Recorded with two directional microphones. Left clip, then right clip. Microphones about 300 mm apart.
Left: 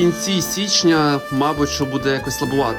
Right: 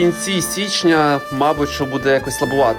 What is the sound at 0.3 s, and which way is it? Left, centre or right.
A man's voice, centre.